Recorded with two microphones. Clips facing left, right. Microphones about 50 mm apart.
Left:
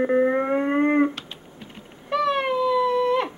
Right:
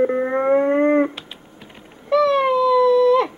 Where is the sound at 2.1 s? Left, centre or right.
Centre.